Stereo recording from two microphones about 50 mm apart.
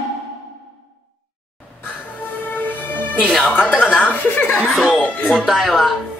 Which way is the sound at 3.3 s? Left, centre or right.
Centre.